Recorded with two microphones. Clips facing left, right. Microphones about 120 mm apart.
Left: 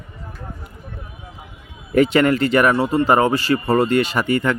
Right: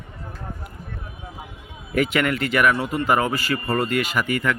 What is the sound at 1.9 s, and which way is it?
Speech, 35° left (ahead or behind).